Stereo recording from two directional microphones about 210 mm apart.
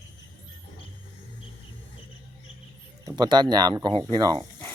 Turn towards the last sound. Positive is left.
turn(degrees=-20)  # may be behind; listen again after turning